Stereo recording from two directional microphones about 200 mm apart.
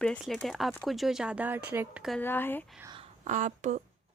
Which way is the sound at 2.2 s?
10° left (ahead or behind).